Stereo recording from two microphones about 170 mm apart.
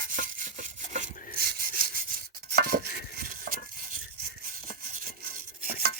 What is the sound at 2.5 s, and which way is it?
Chopping, 65° right (ahead or behind).